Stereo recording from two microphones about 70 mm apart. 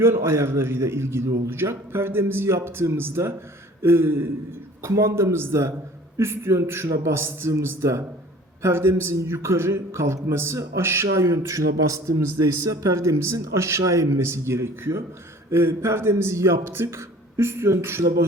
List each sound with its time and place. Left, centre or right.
0.0 s a man's voice: right